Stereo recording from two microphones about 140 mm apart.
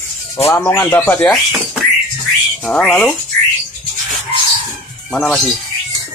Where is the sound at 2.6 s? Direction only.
5° left (ahead or behind).